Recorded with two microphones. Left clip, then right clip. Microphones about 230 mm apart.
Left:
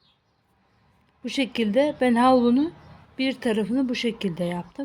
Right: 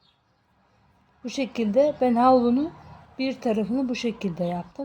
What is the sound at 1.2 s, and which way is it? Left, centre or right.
Speech, left.